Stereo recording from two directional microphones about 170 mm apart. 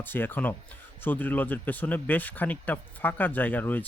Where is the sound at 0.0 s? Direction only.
10° left (ahead or behind).